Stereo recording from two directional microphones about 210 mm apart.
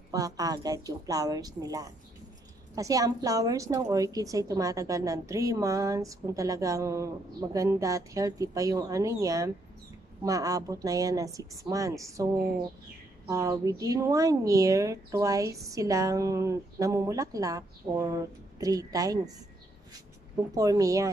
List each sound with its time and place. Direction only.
0.1 s a woman's voice: 15° right (ahead or behind)
13.3 s a woman's voice: 15° right (ahead or behind)
20.5 s a woman's voice: 15° right (ahead or behind)